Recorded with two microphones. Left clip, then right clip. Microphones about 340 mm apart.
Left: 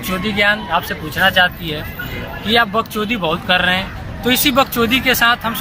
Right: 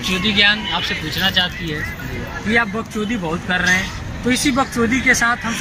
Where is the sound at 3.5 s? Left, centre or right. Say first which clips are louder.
Left 1 dB; centre.